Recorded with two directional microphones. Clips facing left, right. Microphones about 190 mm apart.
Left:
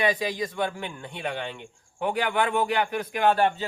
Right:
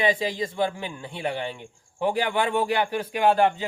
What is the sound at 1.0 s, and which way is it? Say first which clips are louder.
Speech: right 4 dB; 10° right (ahead or behind).